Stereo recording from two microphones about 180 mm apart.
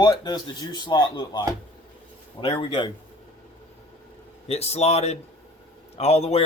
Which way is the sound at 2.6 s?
30° left (ahead or behind).